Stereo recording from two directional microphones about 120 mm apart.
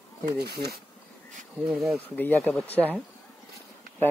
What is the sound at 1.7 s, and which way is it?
Speech, 5° right (ahead or behind).